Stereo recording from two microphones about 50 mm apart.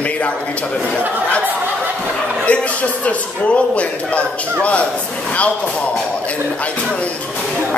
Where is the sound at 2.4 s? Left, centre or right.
Left.